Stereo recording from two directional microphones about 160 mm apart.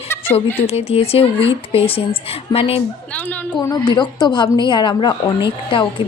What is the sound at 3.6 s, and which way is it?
A woman's voice, 25° left (ahead or behind).